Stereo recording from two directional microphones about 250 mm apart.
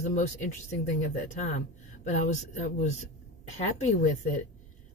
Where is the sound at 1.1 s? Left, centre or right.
Left.